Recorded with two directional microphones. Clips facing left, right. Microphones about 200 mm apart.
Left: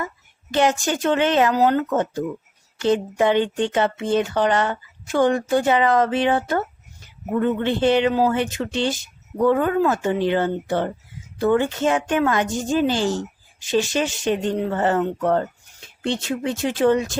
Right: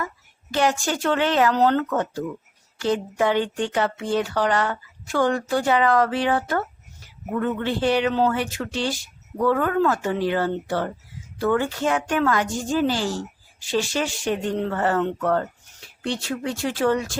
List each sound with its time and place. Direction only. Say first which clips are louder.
0.5 s speech: left 2 dB; 20° left (ahead or behind)
1.5 s speech: left 1 dB; 10° left (ahead or behind)
1.9 s speech: left 3 dB; 20° left (ahead or behind)